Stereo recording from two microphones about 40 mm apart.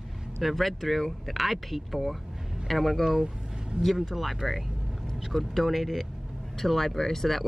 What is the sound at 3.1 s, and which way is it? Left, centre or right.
Speech, centre.